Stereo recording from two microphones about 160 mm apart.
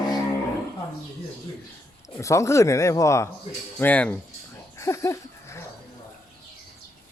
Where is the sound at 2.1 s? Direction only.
20° left (ahead or behind).